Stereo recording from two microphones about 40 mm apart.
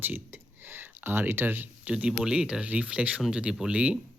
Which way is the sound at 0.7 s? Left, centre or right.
Right.